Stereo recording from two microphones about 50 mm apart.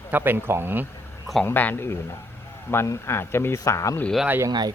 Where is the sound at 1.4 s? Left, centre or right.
Left.